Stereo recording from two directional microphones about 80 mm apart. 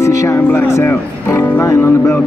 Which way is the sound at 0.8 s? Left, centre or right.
Left.